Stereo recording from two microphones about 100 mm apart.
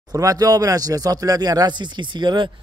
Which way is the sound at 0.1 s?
35° right (ahead or behind).